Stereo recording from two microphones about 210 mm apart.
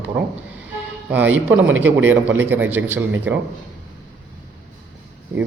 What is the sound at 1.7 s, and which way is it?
A man's voice, 10° right (ahead or behind).